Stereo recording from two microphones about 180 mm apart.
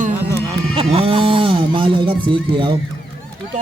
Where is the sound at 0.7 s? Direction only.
30° right (ahead or behind).